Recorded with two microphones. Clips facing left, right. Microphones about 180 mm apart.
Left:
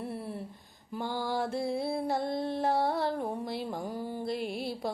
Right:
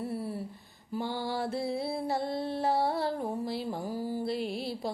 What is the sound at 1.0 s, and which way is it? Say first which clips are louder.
Music: left 2 dB; 45° left (ahead or behind).